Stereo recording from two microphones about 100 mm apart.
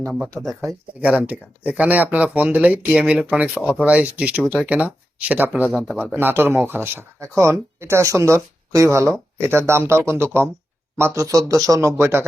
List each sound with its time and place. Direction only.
1.0 s speech: 15° right (ahead or behind)